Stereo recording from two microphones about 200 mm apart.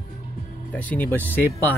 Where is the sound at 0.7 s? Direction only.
10° left (ahead or behind).